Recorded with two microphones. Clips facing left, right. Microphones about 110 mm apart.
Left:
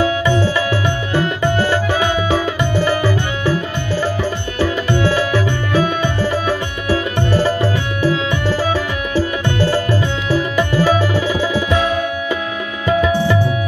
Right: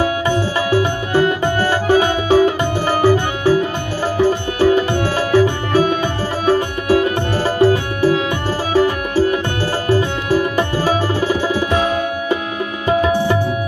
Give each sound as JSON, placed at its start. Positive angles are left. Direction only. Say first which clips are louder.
{"t": 0.0, "sound": "music", "louder": "left 1 dB", "side_deg": -40}